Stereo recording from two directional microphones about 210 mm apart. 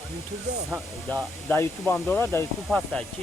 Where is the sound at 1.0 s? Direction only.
5° left (ahead or behind).